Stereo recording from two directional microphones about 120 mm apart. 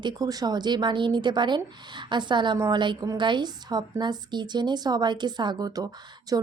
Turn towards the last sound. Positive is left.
turn(degrees=-30)  # may be behind; listen again after turning